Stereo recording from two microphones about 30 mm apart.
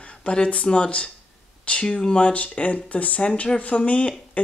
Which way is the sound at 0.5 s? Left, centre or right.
Left.